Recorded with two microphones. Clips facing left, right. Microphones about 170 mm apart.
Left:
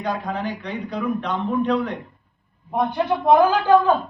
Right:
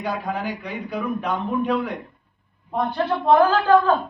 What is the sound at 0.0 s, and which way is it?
A man's voice, 10° right (ahead or behind).